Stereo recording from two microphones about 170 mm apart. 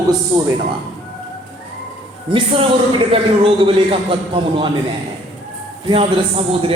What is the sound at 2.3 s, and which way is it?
A man's voice, 30° right (ahead or behind).